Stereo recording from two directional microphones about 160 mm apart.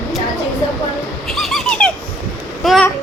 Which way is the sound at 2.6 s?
Centre (ahead or behind).